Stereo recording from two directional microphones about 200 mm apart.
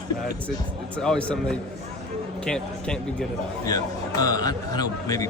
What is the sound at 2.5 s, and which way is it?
Speech, 5° left (ahead or behind).